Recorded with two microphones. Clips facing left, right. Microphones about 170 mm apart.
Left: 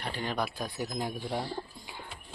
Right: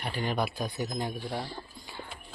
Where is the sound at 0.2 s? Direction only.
Centre (ahead or behind).